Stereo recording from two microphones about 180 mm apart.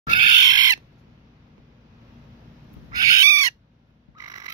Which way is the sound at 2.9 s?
20° right (ahead or behind).